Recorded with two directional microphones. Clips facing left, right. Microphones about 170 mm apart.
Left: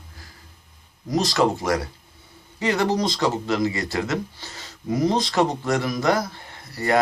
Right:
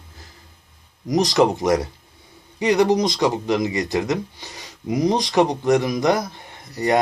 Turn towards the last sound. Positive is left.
turn(degrees=-20)  # may be behind; listen again after turning